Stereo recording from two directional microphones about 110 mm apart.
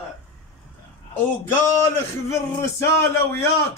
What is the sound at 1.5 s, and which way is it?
Speech, 25° left (ahead or behind).